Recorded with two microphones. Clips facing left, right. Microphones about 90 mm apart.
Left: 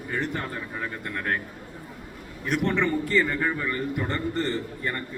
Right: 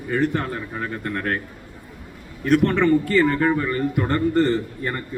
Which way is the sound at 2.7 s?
65° right (ahead or behind).